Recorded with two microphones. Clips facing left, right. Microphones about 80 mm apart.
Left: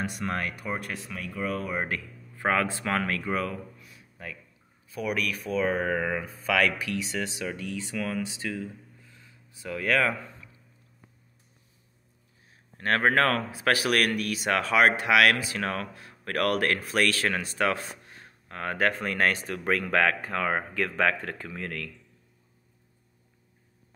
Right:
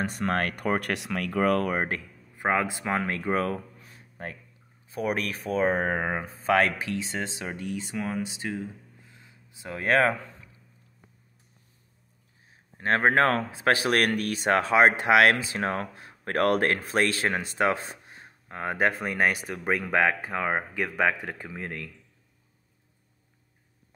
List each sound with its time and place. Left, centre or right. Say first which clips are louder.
0.0 s speech: right 4 dB; right
1.9 s speech: even; right
3.5 s a sound: right 2 dB; right
4.8 s speech: right 1 dB; right
12.7 s speech: right 1 dB; right